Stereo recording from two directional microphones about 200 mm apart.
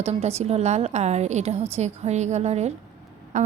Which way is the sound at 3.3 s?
40° right (ahead or behind).